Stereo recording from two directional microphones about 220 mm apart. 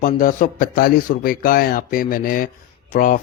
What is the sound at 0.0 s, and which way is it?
Speech, 40° left (ahead or behind).